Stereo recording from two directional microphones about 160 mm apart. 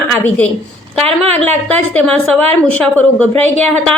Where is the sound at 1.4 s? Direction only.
5° left (ahead or behind).